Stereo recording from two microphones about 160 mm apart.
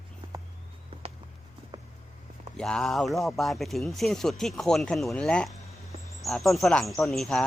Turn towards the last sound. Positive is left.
turn(degrees=0)  # may be behind; listen again after turning